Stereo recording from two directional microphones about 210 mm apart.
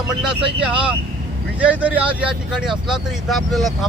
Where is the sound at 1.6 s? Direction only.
5° right (ahead or behind).